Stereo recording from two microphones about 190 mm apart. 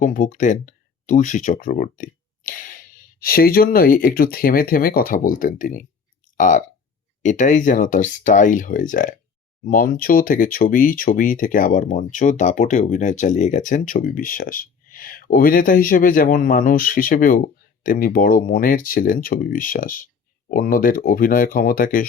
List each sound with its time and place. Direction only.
0.0 s speech: 40° left (ahead or behind)